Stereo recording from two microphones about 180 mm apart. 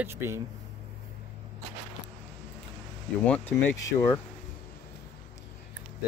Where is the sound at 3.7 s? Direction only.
10° left (ahead or behind).